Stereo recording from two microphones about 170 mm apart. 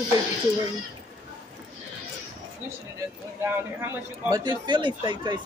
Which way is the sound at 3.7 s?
15° right (ahead or behind).